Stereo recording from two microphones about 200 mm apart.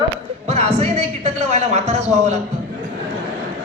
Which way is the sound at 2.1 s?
35° right (ahead or behind).